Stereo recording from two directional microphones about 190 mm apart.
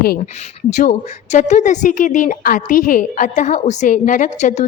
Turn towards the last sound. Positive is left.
turn(degrees=40)  # may be behind; listen again after turning